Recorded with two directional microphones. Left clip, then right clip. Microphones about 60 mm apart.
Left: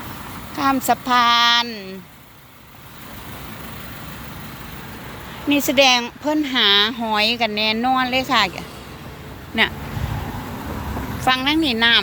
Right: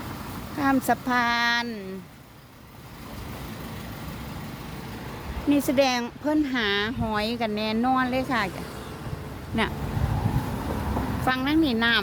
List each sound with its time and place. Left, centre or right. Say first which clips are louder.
0.5 s speech: left 5 dB; centre
0.8 s a woman's voice: left 7 dB; centre
5.5 s a woman's voice: left 7 dB; centre
6.5 s speech: left 10 dB; centre
7.0 s a woman's voice: left 8 dB; centre
10.4 s vehicle: left 1 dB; left
11.4 s speech: left 4 dB; centre